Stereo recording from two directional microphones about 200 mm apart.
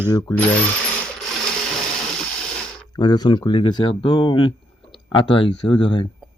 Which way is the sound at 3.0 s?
20° left (ahead or behind).